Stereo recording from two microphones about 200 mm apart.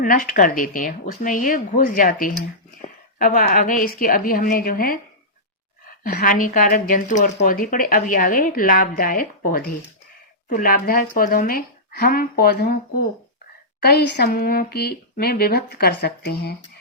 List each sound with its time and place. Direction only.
0.0 s speech: 45° left (ahead or behind)
2.8 s a sound: 30° left (ahead or behind)
3.2 s speech: 45° left (ahead or behind)
6.0 s speech: 45° left (ahead or behind)